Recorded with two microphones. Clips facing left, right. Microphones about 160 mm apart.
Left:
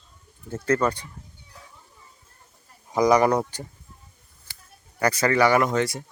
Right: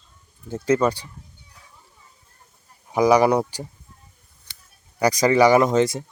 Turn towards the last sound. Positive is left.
turn(degrees=-20)  # may be behind; listen again after turning